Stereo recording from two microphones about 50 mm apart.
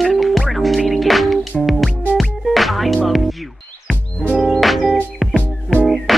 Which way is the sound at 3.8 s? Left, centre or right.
Left.